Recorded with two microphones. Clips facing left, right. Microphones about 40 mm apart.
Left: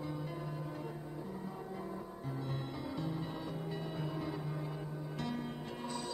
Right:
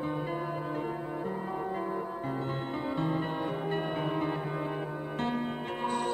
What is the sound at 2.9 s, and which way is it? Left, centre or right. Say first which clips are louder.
Music: right 10 dB; right.